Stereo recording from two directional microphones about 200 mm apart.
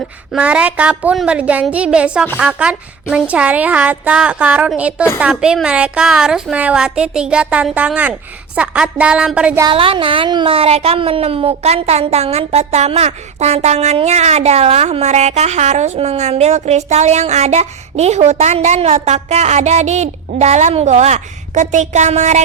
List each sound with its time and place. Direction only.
0.3 s a woman's voice: 5° right (ahead or behind)
9.6 s speech: 25° right (ahead or behind)